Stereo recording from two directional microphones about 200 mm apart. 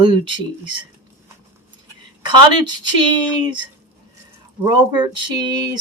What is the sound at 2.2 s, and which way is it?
Speech, 20° right (ahead or behind).